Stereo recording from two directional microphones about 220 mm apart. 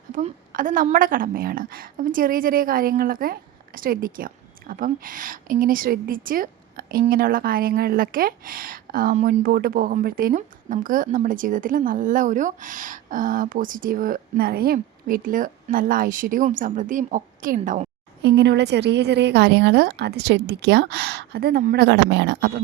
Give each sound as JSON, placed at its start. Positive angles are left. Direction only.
{"t": 0.1, "sound": "a woman's voice", "side_deg": -35}
{"t": 18.2, "sound": "a woman's voice", "side_deg": -50}